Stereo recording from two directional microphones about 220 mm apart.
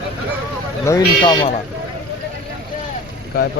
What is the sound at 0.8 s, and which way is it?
Speech, 15° left (ahead or behind).